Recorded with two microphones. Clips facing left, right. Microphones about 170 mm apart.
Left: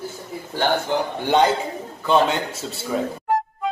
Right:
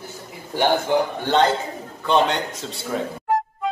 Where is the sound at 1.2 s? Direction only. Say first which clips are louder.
Left 4 dB; 15° left (ahead or behind).